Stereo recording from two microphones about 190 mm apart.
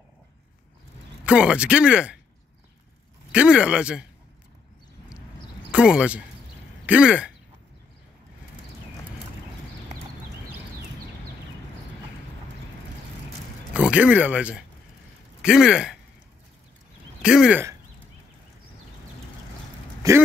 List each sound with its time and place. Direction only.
1.2 s speech: 5° right (ahead or behind)
3.3 s speech: 5° right (ahead or behind)
5.7 s speech: 5° right (ahead or behind)
13.7 s speech: 5° right (ahead or behind)
17.2 s speech: 5° right (ahead or behind)
20.0 s speech: 20° right (ahead or behind)